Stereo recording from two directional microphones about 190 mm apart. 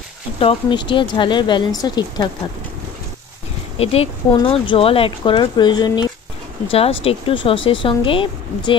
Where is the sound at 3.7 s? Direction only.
30° left (ahead or behind).